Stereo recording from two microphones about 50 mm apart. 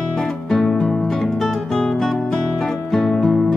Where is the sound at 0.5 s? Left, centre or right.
Centre.